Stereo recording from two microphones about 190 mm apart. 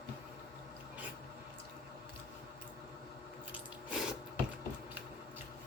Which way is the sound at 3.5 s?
5° right (ahead or behind).